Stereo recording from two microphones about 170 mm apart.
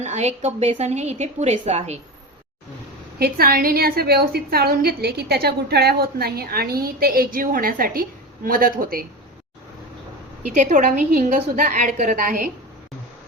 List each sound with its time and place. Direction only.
0.0 s a woman's voice: 40° right (ahead or behind)
3.2 s a woman's voice: 65° right (ahead or behind)
10.4 s a woman's voice: 45° right (ahead or behind)